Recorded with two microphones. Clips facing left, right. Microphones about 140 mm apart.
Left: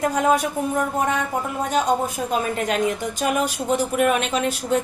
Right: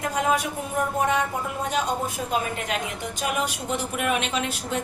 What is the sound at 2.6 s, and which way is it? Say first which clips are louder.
A woman's voice: left 7 dB; 40° left (ahead or behind).